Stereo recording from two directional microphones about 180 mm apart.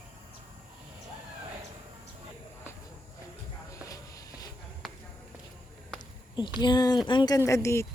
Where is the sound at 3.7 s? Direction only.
20° left (ahead or behind).